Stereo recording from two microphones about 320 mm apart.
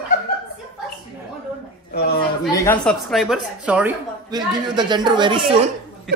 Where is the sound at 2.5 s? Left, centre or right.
Centre.